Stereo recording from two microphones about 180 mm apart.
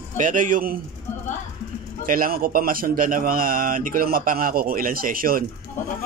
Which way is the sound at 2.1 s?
55° right (ahead or behind).